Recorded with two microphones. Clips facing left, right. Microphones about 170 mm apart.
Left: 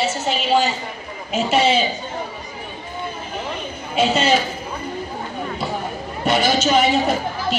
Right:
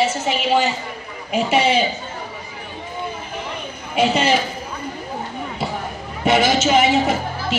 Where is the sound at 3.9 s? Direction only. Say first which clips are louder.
Even; 15° right (ahead or behind).